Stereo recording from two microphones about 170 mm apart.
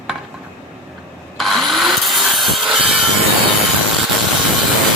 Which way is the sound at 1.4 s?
Centre (ahead or behind).